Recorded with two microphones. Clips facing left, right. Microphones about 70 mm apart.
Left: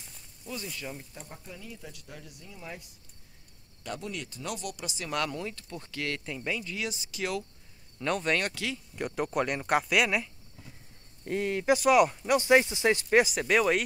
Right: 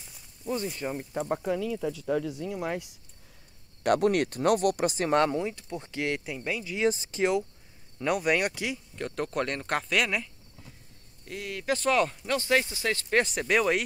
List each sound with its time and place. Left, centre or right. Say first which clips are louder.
0.5 s speech: right 8 dB; right
1.1 s speech: right 17 dB; right
2.4 s speech: right 12 dB; right; by 6.7 s centre
6.8 s speech: right 9 dB; right
8.0 s speech: right 3 dB; centre
8.9 s speech: left 3 dB; centre
11.2 s speech: left 6 dB; left
11.7 s speech: left 3 dB; centre
13.2 s speech: even; centre